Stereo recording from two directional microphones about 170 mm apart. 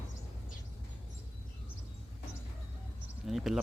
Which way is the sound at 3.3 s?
Centre (ahead or behind).